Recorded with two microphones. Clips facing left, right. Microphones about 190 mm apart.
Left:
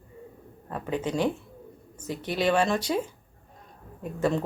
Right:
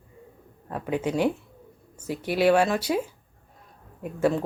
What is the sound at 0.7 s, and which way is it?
Speech, 10° right (ahead or behind).